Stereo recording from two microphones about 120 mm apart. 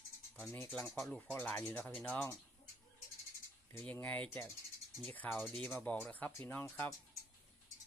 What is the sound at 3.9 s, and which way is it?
Speech, 10° left (ahead or behind).